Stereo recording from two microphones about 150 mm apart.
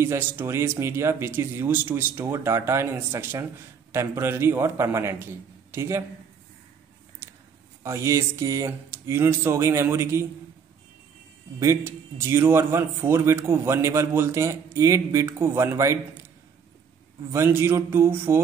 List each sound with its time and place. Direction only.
0.0 s a man's voice: 15° right (ahead or behind)
7.2 s a sound: 15° right (ahead or behind)
7.8 s speech: 20° right (ahead or behind)
11.6 s a man's voice: 20° right (ahead or behind)
17.3 s a man's voice: 15° right (ahead or behind)